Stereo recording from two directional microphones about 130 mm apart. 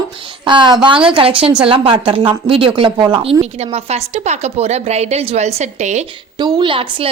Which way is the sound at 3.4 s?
55° right (ahead or behind).